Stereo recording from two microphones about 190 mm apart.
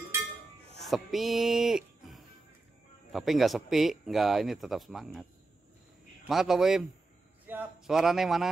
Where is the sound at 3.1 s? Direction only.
Centre (ahead or behind).